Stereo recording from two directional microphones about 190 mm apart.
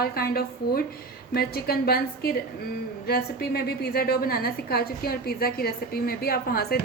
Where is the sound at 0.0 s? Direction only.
55° left (ahead or behind).